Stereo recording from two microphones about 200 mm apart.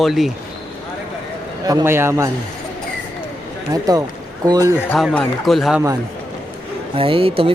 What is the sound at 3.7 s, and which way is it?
A man's voice, 20° right (ahead or behind).